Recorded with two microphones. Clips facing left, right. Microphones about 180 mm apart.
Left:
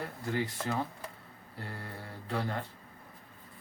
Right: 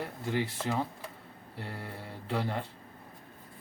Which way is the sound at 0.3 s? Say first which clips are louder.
Right 2 dB; 20° right (ahead or behind).